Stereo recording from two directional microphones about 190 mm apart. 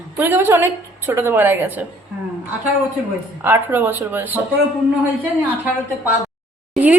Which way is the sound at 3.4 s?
10° right (ahead or behind).